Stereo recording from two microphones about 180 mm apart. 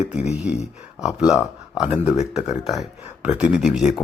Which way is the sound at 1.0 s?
5° right (ahead or behind).